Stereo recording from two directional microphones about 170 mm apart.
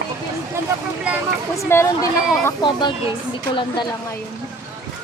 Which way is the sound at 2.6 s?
25° left (ahead or behind).